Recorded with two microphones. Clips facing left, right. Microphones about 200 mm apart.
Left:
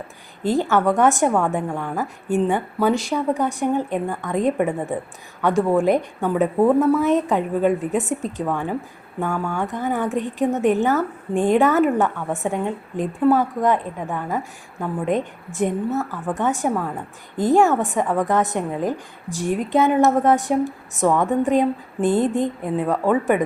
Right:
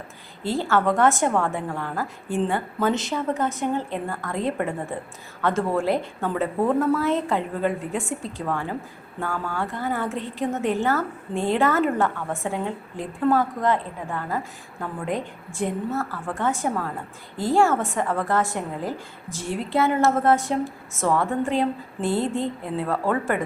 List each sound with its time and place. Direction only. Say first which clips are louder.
0.4 s a woman's voice: left 4 dB; 15° left (ahead or behind)